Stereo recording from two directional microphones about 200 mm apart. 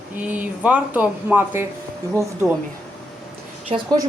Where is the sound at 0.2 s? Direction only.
10° right (ahead or behind).